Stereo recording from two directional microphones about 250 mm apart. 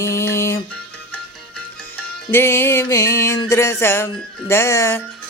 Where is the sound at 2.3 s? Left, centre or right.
Centre.